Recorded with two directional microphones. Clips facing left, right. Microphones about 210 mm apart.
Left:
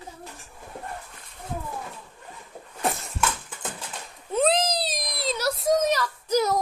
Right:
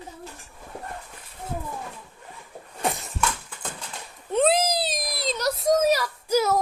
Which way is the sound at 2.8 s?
Centre (ahead or behind).